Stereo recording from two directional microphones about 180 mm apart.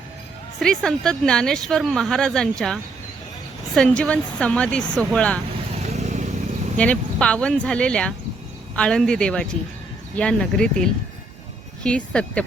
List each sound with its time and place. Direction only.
0.6 s speech: 5° left (ahead or behind)
5.7 s vehicle: 40° right (ahead or behind)
6.7 s speech: 5° left (ahead or behind)